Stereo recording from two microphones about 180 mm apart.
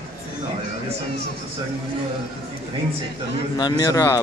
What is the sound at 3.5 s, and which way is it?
Speech, 25° left (ahead or behind).